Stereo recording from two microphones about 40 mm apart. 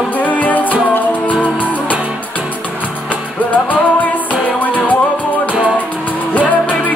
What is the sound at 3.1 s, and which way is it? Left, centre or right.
Music, left.